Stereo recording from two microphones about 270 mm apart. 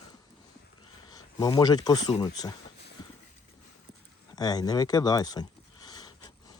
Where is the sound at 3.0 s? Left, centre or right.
Centre.